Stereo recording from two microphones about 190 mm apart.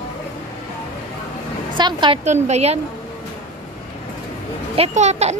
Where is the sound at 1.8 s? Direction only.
25° right (ahead or behind).